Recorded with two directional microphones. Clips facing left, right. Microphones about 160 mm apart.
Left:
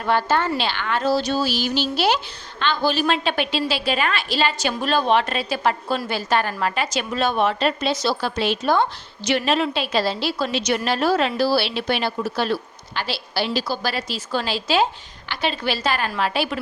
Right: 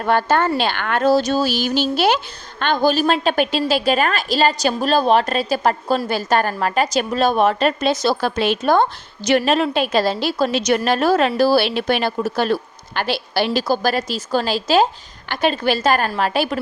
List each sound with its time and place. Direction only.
0.0 s a woman's voice: 50° right (ahead or behind)